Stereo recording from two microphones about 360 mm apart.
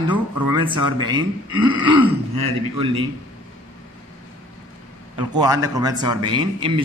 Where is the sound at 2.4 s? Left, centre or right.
Right.